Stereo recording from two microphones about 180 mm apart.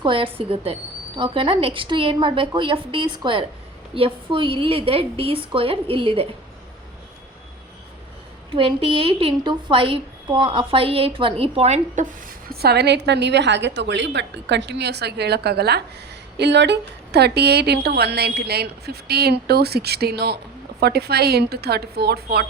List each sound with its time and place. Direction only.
0.0 s a woman's voice: 30° right (ahead or behind)
8.4 s a woman's voice: 30° right (ahead or behind)
12.5 s a woman's voice: 60° right (ahead or behind)